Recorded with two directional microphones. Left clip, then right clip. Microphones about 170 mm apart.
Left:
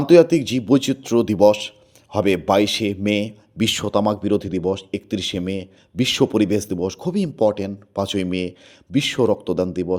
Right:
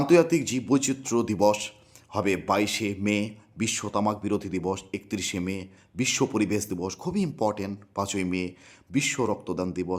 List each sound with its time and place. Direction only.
0.0 s a man's voice: 20° left (ahead or behind)